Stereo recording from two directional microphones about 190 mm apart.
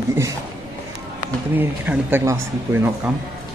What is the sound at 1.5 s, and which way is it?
A man's voice, 10° right (ahead or behind).